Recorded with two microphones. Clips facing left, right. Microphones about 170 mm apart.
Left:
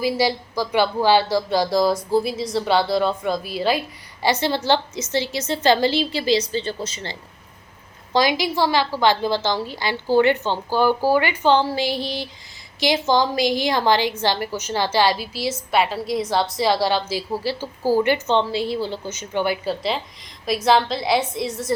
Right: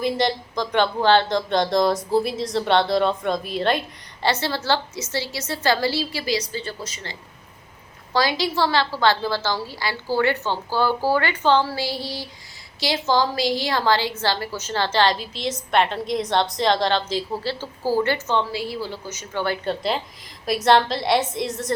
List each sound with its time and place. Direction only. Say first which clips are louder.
0.0 s speech: left 1 dB; 5° left (ahead or behind); by 7.2 s 30° left (ahead or behind)
8.1 s speech: left 2 dB; 15° left (ahead or behind)
19.6 s a woman's voice: even; centre (ahead or behind)